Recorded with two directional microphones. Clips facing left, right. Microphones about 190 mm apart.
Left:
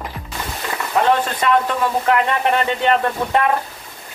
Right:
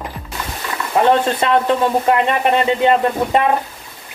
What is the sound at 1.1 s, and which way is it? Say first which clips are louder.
Speech: right 2 dB; 25° right (ahead or behind).